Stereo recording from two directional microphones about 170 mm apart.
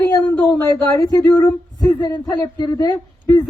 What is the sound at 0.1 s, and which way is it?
A man's voice, 15° left (ahead or behind).